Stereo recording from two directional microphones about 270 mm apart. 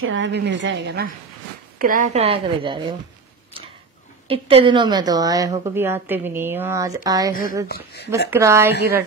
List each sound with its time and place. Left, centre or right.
0.0 s a woman's voice: right; by 2.9 s centre
4.3 s a woman's voice: right
7.6 s speech: left
8.3 s a woman's voice: centre